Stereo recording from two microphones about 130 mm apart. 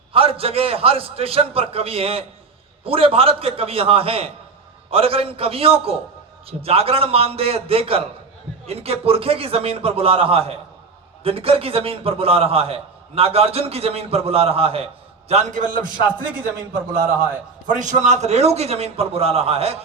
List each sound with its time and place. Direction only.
0.1 s a man's voice: 45° right (ahead or behind)
15.3 s a man's voice: 65° right (ahead or behind); by 16.0 s 90° right
17.7 s a man's voice: 70° right (ahead or behind); by 19.8 s 50° right (ahead or behind)